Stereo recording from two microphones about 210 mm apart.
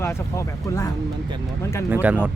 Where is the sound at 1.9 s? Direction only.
5° right (ahead or behind).